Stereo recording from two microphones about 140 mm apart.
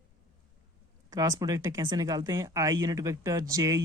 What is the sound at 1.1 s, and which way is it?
Speech, 25° right (ahead or behind).